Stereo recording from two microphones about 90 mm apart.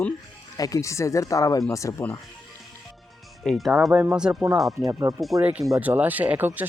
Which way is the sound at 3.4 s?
Centre (ahead or behind).